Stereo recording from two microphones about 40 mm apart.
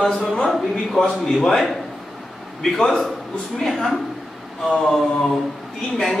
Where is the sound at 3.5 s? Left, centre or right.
Centre.